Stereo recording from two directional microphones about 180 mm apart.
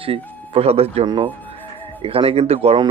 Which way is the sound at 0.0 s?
30° right (ahead or behind).